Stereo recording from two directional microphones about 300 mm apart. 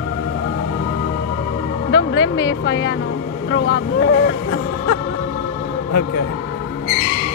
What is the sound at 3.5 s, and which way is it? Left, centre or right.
Speech, left.